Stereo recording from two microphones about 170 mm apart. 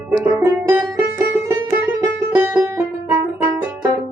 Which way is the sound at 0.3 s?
15° right (ahead or behind).